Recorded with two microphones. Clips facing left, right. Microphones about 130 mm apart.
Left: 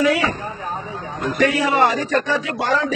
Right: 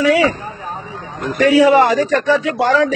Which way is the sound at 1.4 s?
90° right.